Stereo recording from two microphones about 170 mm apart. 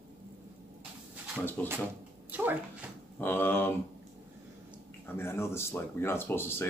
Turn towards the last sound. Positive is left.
turn(degrees=15)  # may be behind; listen again after turning